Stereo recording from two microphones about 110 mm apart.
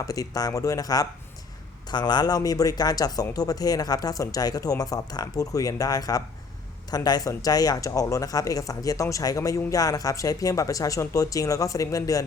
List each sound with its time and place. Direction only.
0.0 s speech: 30° left (ahead or behind)